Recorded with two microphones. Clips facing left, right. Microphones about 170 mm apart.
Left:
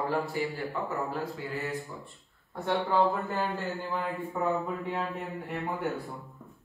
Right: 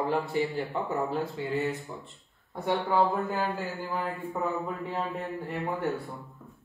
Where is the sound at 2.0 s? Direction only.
20° right (ahead or behind).